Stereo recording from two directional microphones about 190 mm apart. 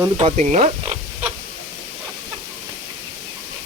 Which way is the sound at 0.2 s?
35° right (ahead or behind).